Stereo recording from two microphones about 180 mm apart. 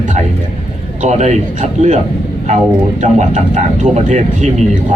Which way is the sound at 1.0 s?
40° right (ahead or behind).